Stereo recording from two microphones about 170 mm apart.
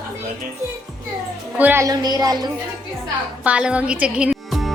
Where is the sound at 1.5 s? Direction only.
10° right (ahead or behind).